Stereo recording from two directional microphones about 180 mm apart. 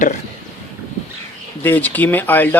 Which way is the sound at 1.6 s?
10° left (ahead or behind).